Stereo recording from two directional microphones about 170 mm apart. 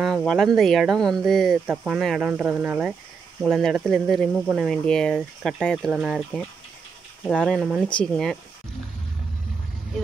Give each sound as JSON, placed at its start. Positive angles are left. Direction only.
{"t": 0.0, "sound": "speech", "side_deg": 0}